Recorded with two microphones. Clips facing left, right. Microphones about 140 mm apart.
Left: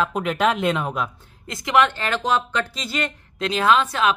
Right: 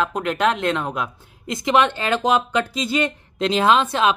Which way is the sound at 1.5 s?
20° right (ahead or behind).